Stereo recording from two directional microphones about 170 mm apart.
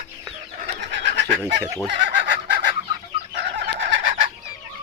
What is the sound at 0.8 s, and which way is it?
Bird, 90° right.